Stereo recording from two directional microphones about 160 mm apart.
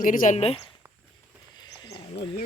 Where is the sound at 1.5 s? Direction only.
25° left (ahead or behind).